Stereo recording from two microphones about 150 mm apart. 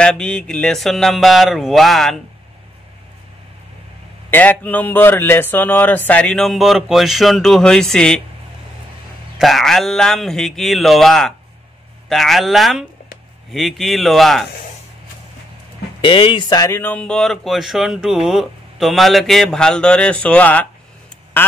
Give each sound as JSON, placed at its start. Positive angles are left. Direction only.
{"t": 0.0, "sound": "speech", "side_deg": 5}
{"t": 4.3, "sound": "a man's voice", "side_deg": 10}
{"t": 9.4, "sound": "speech", "side_deg": 0}
{"t": 16.0, "sound": "speech", "side_deg": 35}
{"t": 16.7, "sound": "speech", "side_deg": 10}
{"t": 21.4, "sound": "quack", "side_deg": 15}